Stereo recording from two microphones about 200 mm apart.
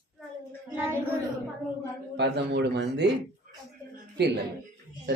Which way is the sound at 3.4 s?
45° right (ahead or behind).